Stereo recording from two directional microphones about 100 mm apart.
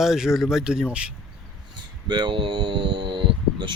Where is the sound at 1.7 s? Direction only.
45° right (ahead or behind).